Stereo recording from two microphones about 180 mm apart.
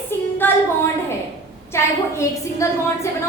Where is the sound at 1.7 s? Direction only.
15° left (ahead or behind).